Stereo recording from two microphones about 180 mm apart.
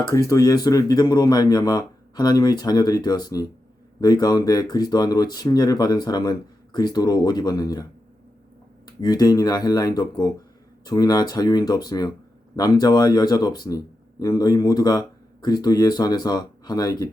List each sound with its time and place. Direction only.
0.3 s speech: 20° left (ahead or behind)
9.0 s speech: 20° left (ahead or behind)